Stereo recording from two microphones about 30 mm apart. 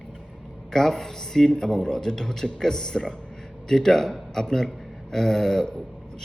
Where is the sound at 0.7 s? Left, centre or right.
Centre.